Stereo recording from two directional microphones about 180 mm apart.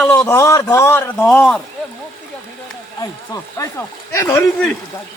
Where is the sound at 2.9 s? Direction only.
20° left (ahead or behind).